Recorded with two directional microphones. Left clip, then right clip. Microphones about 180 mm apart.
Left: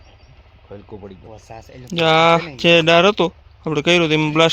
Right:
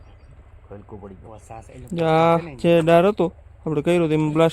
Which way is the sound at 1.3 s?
45° left (ahead or behind).